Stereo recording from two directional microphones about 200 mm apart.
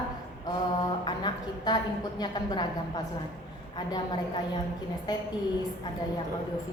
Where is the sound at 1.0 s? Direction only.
20° left (ahead or behind).